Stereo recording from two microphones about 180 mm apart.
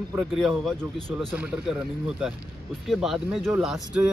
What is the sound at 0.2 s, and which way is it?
A man's voice, centre (ahead or behind).